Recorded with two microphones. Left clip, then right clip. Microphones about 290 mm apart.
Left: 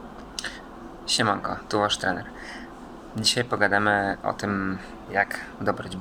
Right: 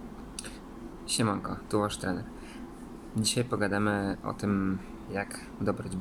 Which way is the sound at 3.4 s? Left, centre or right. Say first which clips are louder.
Left 7 dB; left.